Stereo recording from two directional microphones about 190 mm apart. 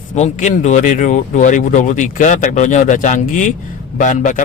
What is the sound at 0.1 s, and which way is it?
Speech, 40° left (ahead or behind).